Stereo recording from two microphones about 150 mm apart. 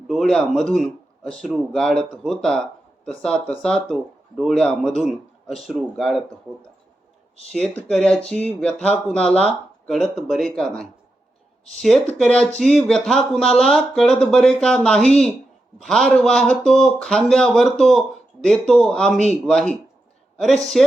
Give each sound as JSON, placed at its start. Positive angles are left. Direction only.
{"t": 0.1, "sound": "speech", "side_deg": 5}
{"t": 7.5, "sound": "speech", "side_deg": 5}
{"t": 12.1, "sound": "speech", "side_deg": 5}
{"t": 20.7, "sound": "speech", "side_deg": 0}